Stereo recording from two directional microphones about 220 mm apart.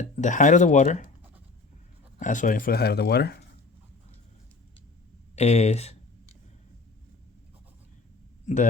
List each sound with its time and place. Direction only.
0.0 s speech: 35° left (ahead or behind)
2.1 s speech: 35° left (ahead or behind)
5.4 s speech: 30° left (ahead or behind)
8.5 s speech: 30° left (ahead or behind)